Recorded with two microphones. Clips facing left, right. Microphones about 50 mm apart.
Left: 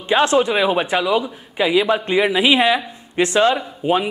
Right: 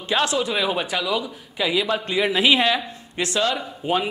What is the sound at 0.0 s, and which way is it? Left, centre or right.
A man's voice, left.